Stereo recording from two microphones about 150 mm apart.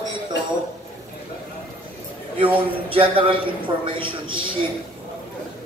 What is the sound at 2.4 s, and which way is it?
A man's voice, 35° right (ahead or behind).